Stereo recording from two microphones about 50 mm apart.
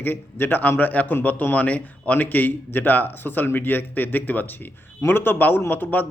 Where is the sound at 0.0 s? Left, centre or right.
Left.